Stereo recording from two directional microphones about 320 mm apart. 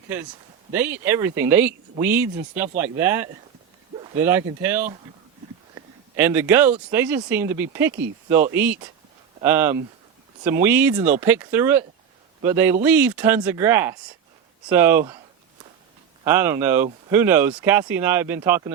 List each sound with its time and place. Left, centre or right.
0.7 s speech: centre
16.2 s speech: centre